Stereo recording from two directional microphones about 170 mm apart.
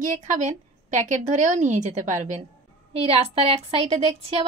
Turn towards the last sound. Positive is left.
turn(degrees=-35)  # may be behind; listen again after turning